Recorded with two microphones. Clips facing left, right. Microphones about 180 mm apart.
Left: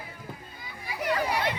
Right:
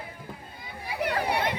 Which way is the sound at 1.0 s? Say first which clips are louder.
Even; 60° right (ahead or behind).